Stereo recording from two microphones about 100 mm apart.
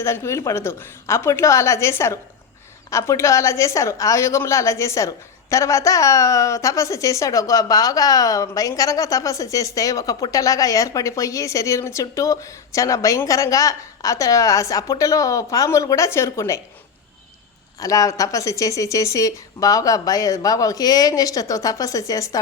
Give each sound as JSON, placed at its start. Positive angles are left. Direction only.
{"t": 0.0, "sound": "a woman's voice", "side_deg": 25}
{"t": 17.7, "sound": "a woman's voice", "side_deg": 35}